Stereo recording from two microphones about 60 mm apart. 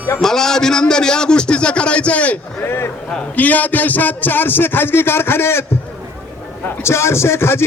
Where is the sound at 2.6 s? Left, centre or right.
Left.